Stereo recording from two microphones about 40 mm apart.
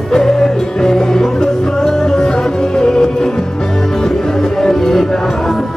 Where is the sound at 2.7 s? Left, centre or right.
Centre.